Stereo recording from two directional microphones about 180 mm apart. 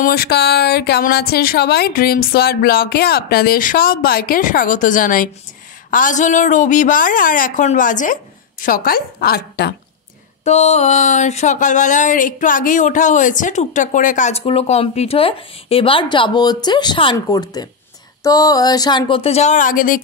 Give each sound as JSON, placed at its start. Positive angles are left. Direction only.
{"t": 0.0, "sound": "a woman's voice", "side_deg": 60}
{"t": 10.4, "sound": "speech", "side_deg": 40}